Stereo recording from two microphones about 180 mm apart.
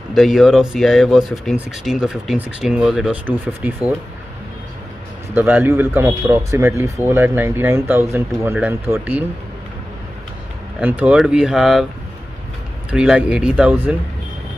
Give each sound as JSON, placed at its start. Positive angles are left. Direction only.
{"t": 0.1, "sound": "speech", "side_deg": 0}
{"t": 5.3, "sound": "speech", "side_deg": -10}
{"t": 10.8, "sound": "speech", "side_deg": -10}
{"t": 12.9, "sound": "speech", "side_deg": -5}